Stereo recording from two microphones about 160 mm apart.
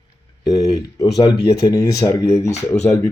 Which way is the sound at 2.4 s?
45° left (ahead or behind).